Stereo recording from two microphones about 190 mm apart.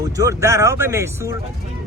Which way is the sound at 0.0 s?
15° right (ahead or behind).